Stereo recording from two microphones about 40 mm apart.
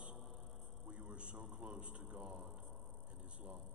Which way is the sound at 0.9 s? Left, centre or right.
Right.